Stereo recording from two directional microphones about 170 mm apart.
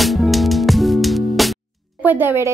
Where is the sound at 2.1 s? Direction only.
10° right (ahead or behind).